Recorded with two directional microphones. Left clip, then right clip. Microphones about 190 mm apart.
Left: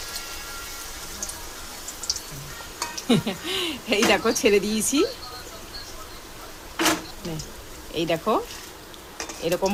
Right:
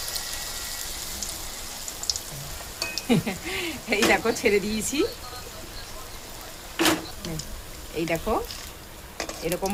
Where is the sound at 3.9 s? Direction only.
30° left (ahead or behind).